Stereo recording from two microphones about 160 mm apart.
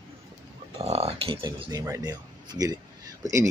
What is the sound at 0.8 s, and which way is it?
Speech, 40° right (ahead or behind).